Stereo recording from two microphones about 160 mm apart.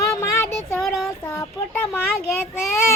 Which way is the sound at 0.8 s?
Centre (ahead or behind).